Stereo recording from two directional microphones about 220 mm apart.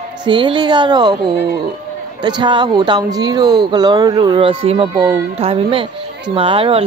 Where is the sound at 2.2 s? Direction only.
20° right (ahead or behind).